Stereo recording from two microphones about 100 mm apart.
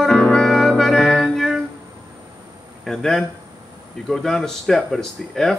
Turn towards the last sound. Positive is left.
turn(degrees=5)  # may be behind; listen again after turning